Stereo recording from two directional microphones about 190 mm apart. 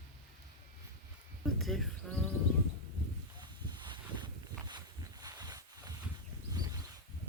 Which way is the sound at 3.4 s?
25° right (ahead or behind).